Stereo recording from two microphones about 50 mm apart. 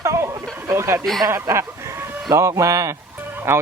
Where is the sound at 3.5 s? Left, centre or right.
Right.